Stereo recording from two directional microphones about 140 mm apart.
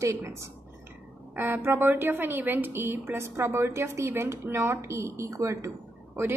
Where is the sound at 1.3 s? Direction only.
15° right (ahead or behind).